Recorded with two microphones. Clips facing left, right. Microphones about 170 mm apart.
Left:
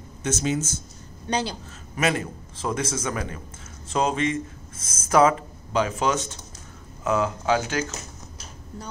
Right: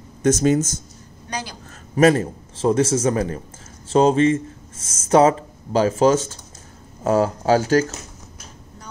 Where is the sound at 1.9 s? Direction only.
35° right (ahead or behind).